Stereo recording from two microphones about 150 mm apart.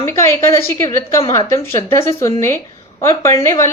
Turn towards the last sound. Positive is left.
turn(degrees=20)  # may be behind; listen again after turning